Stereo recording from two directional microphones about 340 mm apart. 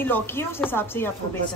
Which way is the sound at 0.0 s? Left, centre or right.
Centre.